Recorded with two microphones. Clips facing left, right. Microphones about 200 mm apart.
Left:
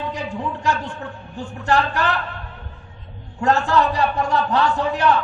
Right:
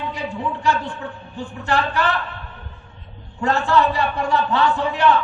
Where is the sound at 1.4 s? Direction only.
45° left (ahead or behind).